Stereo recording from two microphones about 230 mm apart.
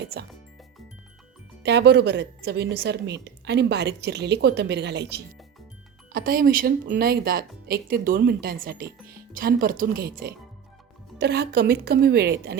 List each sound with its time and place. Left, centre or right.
0.0 s speech: right
1.6 s a woman's voice: right